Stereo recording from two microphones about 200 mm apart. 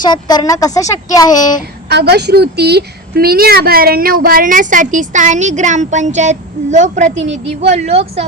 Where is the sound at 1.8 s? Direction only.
55° right (ahead or behind).